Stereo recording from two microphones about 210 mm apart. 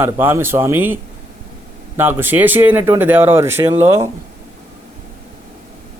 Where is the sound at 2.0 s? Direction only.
10° right (ahead or behind).